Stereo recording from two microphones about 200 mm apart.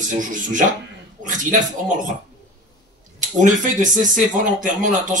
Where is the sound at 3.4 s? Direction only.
40° right (ahead or behind).